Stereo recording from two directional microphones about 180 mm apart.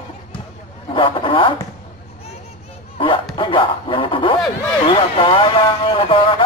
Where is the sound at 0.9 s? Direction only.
30° left (ahead or behind).